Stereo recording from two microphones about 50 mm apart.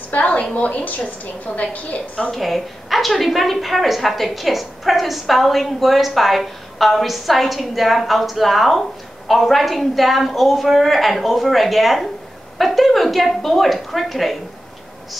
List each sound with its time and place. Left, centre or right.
0.1 s a woman's voice: left
2.3 s a woman's voice: centre